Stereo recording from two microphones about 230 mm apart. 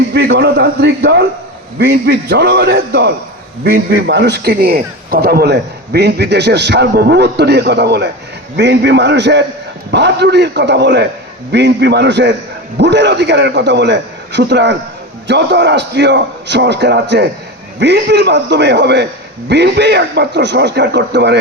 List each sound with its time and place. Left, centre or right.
0.1 s a man's voice: right